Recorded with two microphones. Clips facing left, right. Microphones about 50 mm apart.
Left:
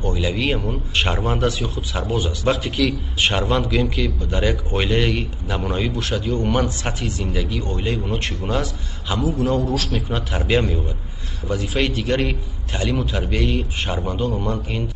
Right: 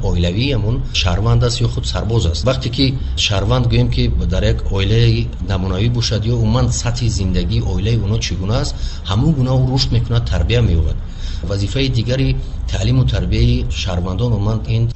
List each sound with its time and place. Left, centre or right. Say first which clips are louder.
0.0 s a man's voice: right 3 dB; centre